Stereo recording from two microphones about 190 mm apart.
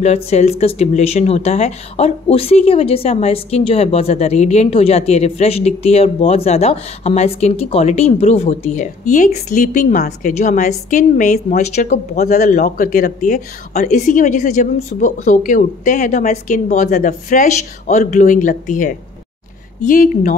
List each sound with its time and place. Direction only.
0.0 s speech: 35° left (ahead or behind)